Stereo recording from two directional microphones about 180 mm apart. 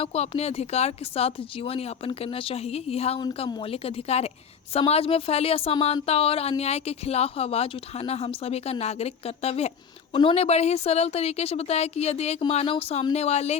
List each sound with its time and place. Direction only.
0.0 s a woman's voice: 35° left (ahead or behind)